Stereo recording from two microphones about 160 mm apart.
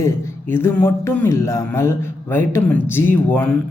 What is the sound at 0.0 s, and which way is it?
Speech, 15° left (ahead or behind).